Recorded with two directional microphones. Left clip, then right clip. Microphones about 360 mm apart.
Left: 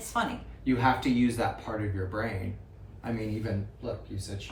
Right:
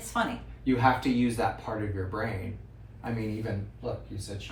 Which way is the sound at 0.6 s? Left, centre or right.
Centre.